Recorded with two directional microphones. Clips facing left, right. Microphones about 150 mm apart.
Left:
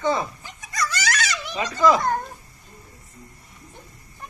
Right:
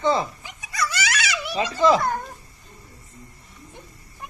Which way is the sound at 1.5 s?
30° right (ahead or behind).